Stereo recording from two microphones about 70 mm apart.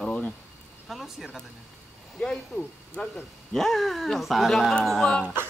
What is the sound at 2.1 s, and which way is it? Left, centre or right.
Speech, centre.